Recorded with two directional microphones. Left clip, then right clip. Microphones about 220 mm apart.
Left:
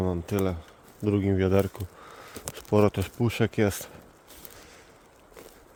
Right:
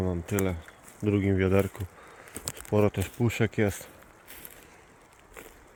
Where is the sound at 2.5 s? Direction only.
20° left (ahead or behind).